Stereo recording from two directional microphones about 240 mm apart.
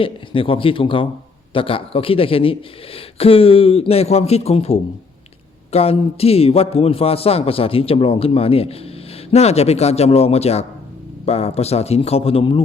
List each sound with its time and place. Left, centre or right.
0.0 s speech: left